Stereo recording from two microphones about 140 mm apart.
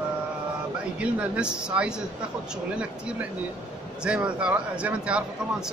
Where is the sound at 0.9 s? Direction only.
10° right (ahead or behind).